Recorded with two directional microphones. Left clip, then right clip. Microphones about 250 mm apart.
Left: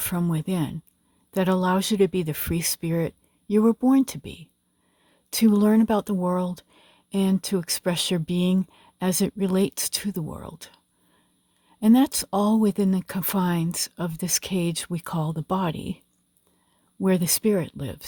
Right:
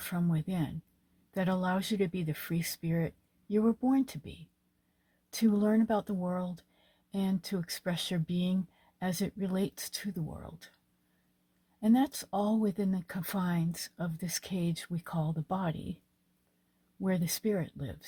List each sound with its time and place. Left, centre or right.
0.0 s speech: left
11.8 s speech: left
17.0 s speech: left